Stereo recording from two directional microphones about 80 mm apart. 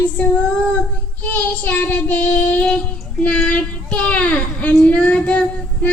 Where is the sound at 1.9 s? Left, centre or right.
Centre.